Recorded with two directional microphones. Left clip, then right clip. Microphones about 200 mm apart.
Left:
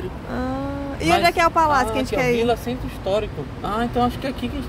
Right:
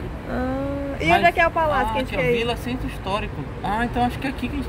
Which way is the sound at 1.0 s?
5° left (ahead or behind).